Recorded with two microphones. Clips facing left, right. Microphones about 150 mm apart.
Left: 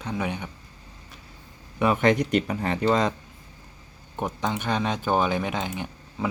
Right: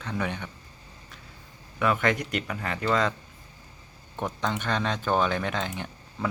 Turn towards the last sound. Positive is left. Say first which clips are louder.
# left 3 dB
turn(degrees=10)  # may be behind; listen again after turning